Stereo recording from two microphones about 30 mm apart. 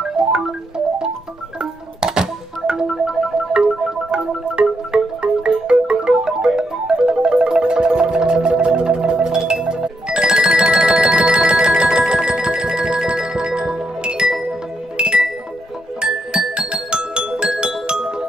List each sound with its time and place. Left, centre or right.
0.1 s music: right
6.9 s marimba: right
7.2 s music: right
11.2 s marimba: right
13.6 s music: right